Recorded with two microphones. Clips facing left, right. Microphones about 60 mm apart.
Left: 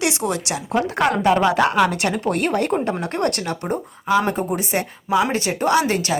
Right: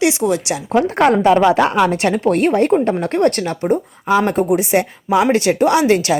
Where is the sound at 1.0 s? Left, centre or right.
Right.